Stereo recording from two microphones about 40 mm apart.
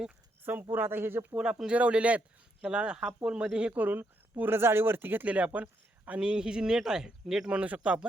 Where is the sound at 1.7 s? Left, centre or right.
Right.